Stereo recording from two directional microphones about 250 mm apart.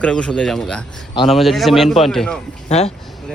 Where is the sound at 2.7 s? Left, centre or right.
Left.